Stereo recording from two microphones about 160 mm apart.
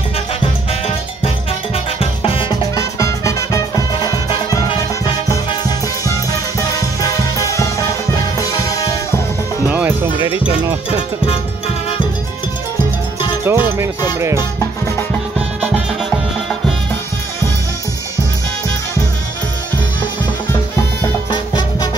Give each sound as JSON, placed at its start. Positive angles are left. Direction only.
{"t": 0.4, "sound": "music", "side_deg": 40}
{"t": 2.7, "sound": "music", "side_deg": 20}
{"t": 9.7, "sound": "music", "side_deg": -10}
{"t": 10.3, "sound": "music", "side_deg": 35}
{"t": 13.4, "sound": "music", "side_deg": -15}
{"t": 14.6, "sound": "music", "side_deg": 15}
{"t": 15.3, "sound": "music", "side_deg": -10}
{"t": 21.3, "sound": "music", "side_deg": 25}